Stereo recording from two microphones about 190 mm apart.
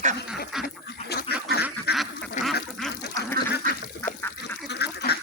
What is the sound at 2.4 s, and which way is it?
Duck, 40° left (ahead or behind).